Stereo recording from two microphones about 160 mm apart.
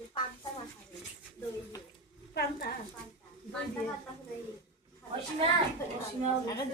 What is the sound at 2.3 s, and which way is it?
Speech, 85° left.